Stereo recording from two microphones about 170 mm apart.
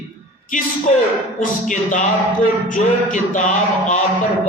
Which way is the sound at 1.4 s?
50° left (ahead or behind).